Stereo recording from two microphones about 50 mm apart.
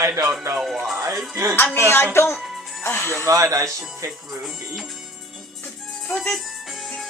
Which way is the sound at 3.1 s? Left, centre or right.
Right.